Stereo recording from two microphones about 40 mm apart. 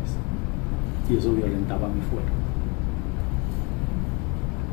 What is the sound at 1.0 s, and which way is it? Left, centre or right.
Speech, centre.